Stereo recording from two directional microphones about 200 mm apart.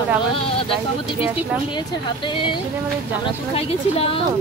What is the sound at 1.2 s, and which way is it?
Speech, 10° right (ahead or behind).